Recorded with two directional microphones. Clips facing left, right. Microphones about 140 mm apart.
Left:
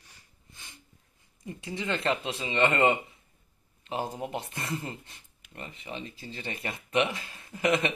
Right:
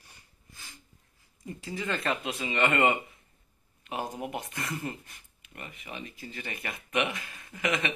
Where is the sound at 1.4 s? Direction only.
25° left (ahead or behind).